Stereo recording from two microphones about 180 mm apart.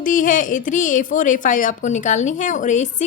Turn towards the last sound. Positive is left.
turn(degrees=40)  # may be behind; listen again after turning